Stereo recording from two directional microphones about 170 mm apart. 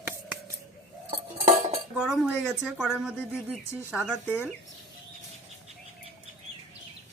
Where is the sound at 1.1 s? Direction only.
35° right (ahead or behind).